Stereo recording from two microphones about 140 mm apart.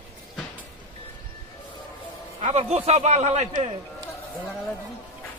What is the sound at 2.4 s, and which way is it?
A man's voice, 55° right (ahead or behind).